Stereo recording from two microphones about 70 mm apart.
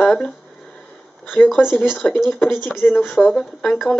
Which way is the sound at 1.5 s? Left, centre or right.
Centre.